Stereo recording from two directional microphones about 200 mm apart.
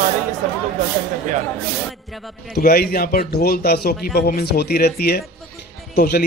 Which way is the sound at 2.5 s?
50° left (ahead or behind).